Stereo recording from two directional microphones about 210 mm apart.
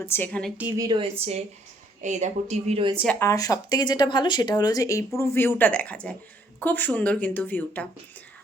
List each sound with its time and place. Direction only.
0.0 s speech: 10° left (ahead or behind)
0.5 s speech: 10° right (ahead or behind)
0.9 s speech: 25° right (ahead or behind)
3.2 s speech: 15° left (ahead or behind)